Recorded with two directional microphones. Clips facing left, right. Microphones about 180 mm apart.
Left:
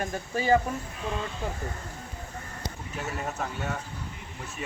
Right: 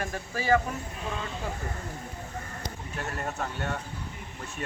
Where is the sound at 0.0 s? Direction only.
20° left (ahead or behind).